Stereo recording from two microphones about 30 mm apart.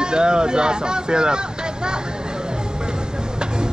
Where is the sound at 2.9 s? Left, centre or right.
Right.